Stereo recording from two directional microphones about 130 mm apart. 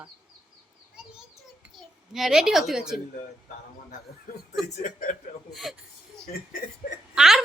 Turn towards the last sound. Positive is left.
turn(degrees=-5)  # may be behind; listen again after turning